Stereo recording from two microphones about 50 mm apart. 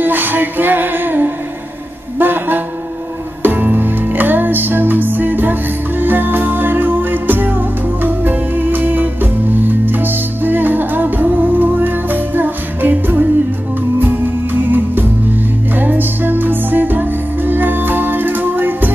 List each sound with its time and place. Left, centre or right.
0.0 s music: right